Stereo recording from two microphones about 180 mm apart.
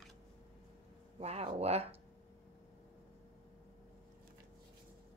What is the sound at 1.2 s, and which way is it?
Speech, 35° right (ahead or behind).